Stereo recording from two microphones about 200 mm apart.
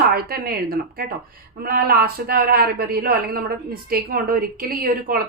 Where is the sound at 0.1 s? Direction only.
50° right (ahead or behind).